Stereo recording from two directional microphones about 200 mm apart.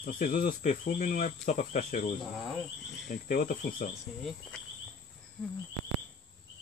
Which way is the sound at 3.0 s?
40° left (ahead or behind).